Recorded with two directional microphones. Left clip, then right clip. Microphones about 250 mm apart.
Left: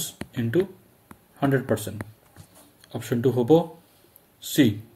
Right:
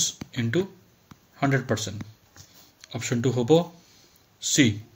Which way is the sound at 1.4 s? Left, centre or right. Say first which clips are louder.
Left 1 dB; centre.